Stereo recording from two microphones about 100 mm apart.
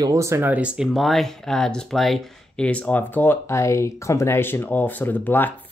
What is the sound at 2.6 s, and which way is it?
Speech, 15° left (ahead or behind).